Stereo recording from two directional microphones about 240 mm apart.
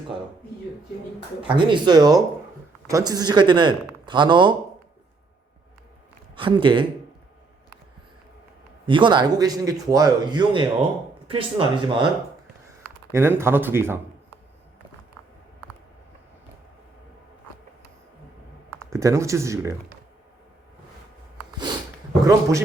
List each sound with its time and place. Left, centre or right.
1.5 s a man's voice: centre
6.3 s a man's voice: right
8.9 s a man's voice: centre
13.1 s a man's voice: centre
18.9 s a man's voice: centre
22.2 s a man's voice: centre